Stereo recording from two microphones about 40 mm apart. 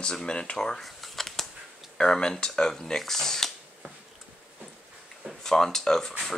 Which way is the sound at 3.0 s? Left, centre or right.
Centre.